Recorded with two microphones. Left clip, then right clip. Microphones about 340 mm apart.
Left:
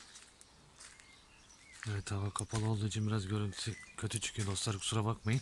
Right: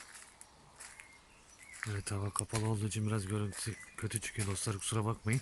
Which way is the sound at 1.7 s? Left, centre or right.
Centre.